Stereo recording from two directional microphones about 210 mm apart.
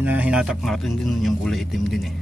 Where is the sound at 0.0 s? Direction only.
5° right (ahead or behind).